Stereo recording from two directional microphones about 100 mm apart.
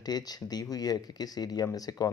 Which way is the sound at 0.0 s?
40° left (ahead or behind).